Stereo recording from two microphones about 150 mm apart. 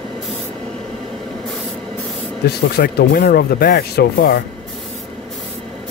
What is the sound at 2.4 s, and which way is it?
Speech, 90° left.